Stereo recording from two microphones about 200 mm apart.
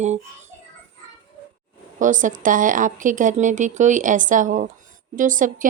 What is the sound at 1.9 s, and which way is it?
A woman's voice, 40° right (ahead or behind).